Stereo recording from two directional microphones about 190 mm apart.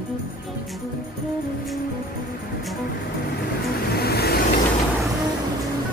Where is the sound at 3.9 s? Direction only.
55° left (ahead or behind).